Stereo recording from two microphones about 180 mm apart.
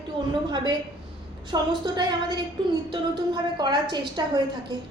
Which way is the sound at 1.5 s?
25° right (ahead or behind).